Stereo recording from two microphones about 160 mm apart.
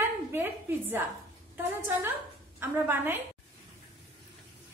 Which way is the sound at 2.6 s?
15° right (ahead or behind).